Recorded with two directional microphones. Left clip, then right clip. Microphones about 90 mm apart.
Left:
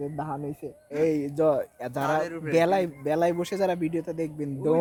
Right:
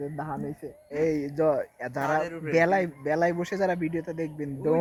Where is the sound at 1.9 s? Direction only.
30° left (ahead or behind).